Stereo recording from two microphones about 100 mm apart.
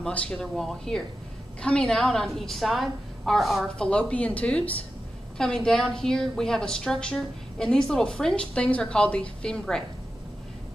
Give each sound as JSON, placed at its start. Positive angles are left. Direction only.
{"t": 0.0, "sound": "a woman's voice", "side_deg": 5}